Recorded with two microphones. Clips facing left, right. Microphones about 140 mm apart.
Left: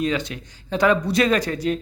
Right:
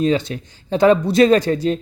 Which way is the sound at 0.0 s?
30° right (ahead or behind).